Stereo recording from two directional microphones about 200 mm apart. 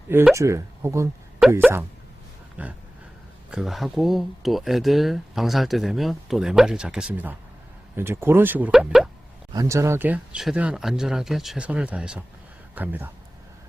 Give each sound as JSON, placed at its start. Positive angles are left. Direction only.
{"t": 0.1, "sound": "speech", "side_deg": -10}
{"t": 1.4, "sound": "a sound", "side_deg": -5}
{"t": 2.6, "sound": "speech", "side_deg": -5}
{"t": 9.5, "sound": "speech", "side_deg": -15}